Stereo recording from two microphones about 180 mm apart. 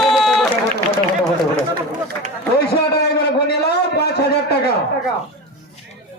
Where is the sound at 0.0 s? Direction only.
Centre (ahead or behind).